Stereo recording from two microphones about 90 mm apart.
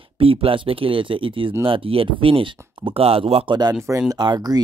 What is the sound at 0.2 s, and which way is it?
Speech, 90° right.